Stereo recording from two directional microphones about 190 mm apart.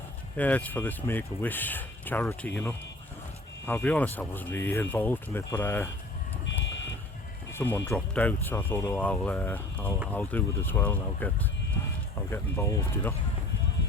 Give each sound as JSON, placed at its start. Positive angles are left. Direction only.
{"t": 0.3, "sound": "speech", "side_deg": 10}
{"t": 3.7, "sound": "speech", "side_deg": 10}
{"t": 6.4, "sound": "a sound", "side_deg": 70}
{"t": 7.5, "sound": "speech", "side_deg": 10}